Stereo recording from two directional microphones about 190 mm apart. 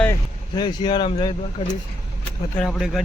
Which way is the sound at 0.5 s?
25° left (ahead or behind).